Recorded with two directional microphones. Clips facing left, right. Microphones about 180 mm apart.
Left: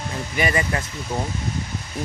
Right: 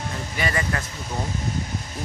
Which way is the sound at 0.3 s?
20° left (ahead or behind).